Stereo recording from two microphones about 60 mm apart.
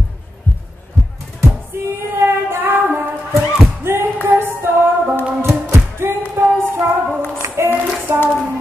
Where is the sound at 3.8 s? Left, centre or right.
Right.